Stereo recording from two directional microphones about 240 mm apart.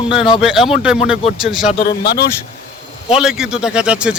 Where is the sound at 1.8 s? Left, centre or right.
Left.